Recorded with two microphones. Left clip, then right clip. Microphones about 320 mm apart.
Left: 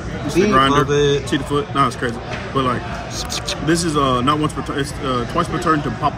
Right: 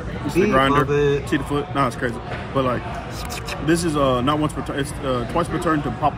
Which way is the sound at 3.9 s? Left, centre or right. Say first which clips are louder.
Left 3 dB; centre.